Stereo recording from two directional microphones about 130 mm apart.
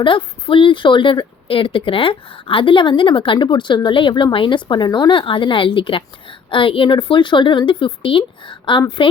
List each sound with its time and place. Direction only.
0.0 s a woman's voice: 40° left (ahead or behind)